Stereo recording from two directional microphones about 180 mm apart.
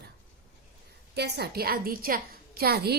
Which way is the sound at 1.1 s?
65° right (ahead or behind).